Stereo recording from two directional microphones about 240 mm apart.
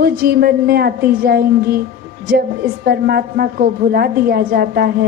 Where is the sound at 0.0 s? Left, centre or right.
Right.